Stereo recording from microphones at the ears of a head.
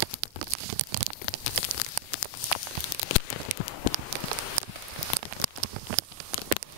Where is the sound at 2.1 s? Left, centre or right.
Left.